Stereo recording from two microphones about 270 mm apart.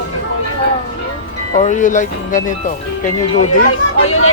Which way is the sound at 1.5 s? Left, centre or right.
Left.